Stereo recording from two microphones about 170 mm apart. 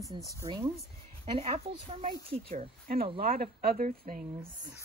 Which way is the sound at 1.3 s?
35° right (ahead or behind).